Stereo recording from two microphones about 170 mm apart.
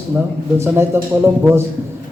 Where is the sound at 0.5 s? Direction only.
15° right (ahead or behind).